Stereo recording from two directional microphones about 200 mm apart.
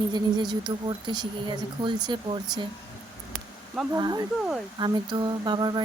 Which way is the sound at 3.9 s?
20° right (ahead or behind).